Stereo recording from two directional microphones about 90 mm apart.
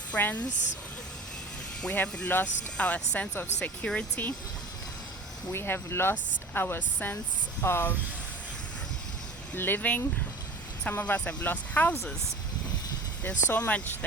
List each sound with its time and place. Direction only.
0.1 s speech: 20° left (ahead or behind)
1.8 s speech: 15° left (ahead or behind)
5.5 s speech: 25° left (ahead or behind)
9.6 s speech: 25° left (ahead or behind)
13.2 s speech: 20° left (ahead or behind)